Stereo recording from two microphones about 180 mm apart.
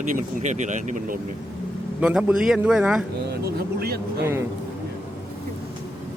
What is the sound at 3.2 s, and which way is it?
Speech, 60° right (ahead or behind).